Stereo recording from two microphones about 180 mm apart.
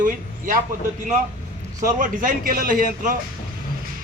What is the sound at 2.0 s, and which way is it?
A man's voice, 50° right (ahead or behind).